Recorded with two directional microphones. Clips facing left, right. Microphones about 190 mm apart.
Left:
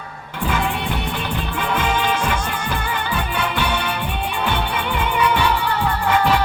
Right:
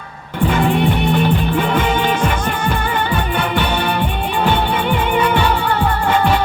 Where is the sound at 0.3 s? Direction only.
25° right (ahead or behind).